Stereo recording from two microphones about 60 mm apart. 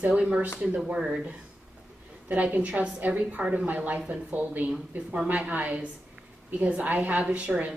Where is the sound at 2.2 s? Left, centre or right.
Right.